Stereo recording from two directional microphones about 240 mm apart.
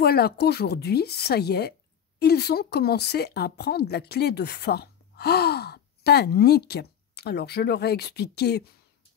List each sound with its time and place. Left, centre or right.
0.0 s speech: left